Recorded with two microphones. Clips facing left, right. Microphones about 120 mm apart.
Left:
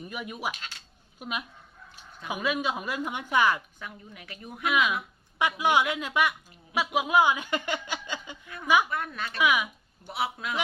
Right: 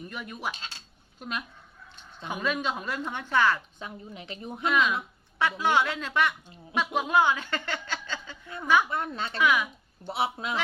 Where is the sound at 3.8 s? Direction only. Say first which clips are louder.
Right 3 dB; 25° right (ahead or behind).